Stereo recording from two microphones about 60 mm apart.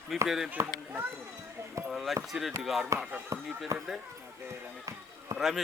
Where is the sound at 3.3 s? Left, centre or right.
Right.